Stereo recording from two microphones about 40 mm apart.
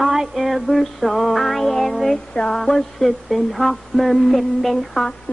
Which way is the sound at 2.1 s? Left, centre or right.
Left.